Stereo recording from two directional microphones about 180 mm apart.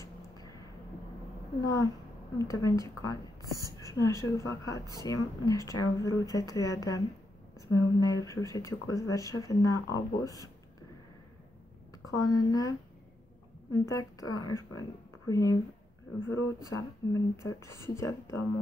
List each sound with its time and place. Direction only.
1.6 s speech: 15° left (ahead or behind)
3.8 s a sound: 20° left (ahead or behind)
4.2 s speech: 15° left (ahead or behind)
12.2 s speech: 20° left (ahead or behind)